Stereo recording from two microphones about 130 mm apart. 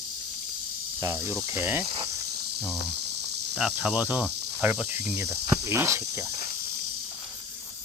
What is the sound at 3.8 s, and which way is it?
Cricket, 10° right (ahead or behind).